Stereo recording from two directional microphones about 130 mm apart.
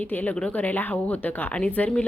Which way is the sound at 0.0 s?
10° left (ahead or behind).